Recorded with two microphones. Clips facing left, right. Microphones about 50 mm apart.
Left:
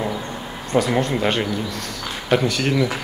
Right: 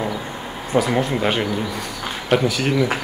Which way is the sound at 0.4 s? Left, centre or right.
Centre.